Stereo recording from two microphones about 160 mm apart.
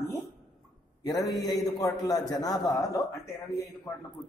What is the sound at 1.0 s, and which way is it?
A man's voice, 25° left (ahead or behind).